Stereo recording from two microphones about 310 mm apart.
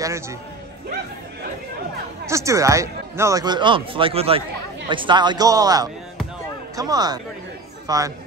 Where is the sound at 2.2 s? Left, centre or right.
Centre.